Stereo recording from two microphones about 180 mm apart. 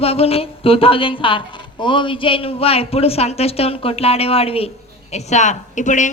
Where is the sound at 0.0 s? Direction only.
35° left (ahead or behind).